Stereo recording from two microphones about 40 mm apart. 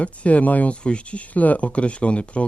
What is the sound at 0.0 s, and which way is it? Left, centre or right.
Speech, left.